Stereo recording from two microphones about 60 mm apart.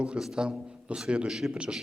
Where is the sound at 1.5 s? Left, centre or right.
Centre.